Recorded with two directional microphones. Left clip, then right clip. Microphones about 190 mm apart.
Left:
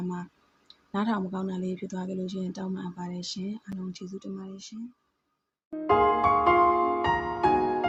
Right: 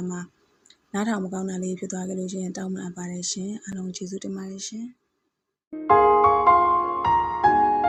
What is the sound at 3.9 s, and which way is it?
Speech, 30° right (ahead or behind).